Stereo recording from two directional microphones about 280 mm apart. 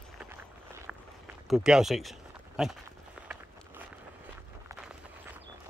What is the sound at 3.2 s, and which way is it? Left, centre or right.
Walk, centre.